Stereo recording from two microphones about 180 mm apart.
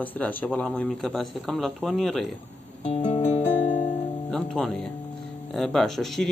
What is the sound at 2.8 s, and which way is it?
Music, 40° left (ahead or behind).